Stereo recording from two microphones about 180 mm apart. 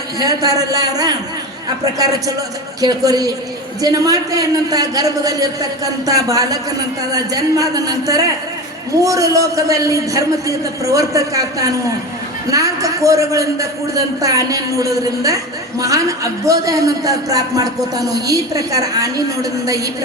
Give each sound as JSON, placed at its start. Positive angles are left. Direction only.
{"t": 0.2, "sound": "a man's voice", "side_deg": -20}